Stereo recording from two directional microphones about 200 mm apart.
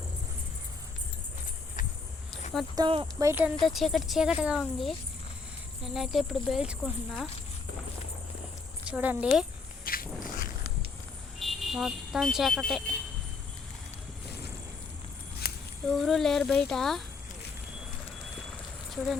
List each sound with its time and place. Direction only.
2.7 s speech: 25° right (ahead or behind)
3.7 s speech: centre (ahead or behind)
8.9 s speech: 5° right (ahead or behind)
9.8 s walk: 45° left (ahead or behind)
11.3 s speech: centre (ahead or behind)
15.4 s a sound: 55° left (ahead or behind)
15.9 s speech: centre (ahead or behind)
18.3 s vehicle: centre (ahead or behind)